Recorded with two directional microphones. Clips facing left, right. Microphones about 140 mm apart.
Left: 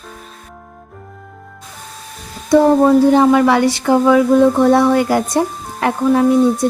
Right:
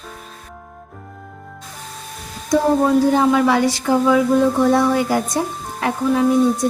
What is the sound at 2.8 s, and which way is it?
Speech, 60° left (ahead or behind).